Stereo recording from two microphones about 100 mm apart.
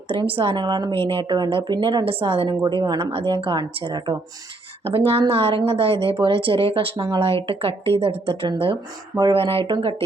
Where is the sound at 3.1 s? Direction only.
65° right (ahead or behind).